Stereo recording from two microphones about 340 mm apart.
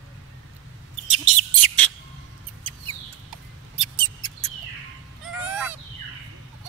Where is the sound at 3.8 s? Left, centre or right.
Centre.